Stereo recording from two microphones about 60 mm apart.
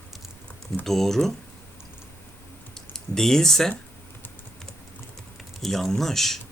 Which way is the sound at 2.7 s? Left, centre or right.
Centre.